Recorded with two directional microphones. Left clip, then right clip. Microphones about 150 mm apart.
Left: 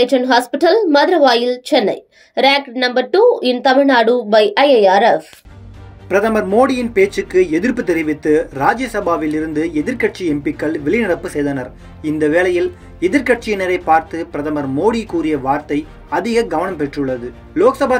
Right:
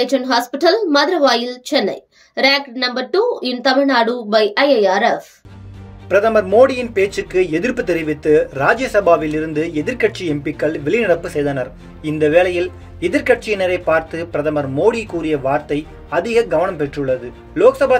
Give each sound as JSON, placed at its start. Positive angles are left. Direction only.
{"t": 0.0, "sound": "a woman's voice", "side_deg": 5}
{"t": 6.0, "sound": "speech", "side_deg": 45}